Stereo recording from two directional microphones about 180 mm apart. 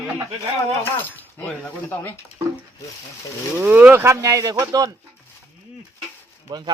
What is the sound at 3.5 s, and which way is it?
Speech, 10° right (ahead or behind).